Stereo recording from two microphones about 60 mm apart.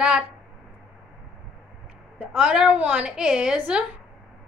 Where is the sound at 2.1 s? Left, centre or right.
Centre.